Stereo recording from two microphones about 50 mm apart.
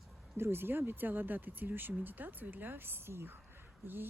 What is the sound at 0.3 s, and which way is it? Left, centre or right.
Speech, right.